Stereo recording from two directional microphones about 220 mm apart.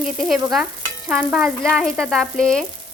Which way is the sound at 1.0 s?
5° right (ahead or behind).